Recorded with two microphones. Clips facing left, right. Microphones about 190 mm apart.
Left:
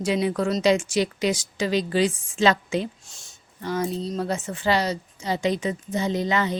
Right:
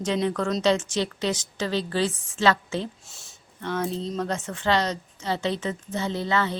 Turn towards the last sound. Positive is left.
turn(degrees=15)  # may be behind; listen again after turning